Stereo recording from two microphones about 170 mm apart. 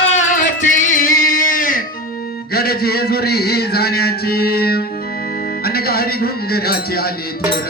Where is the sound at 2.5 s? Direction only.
65° left (ahead or behind).